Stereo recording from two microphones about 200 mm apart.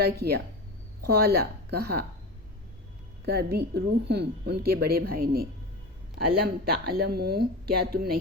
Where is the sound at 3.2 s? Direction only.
50° right (ahead or behind).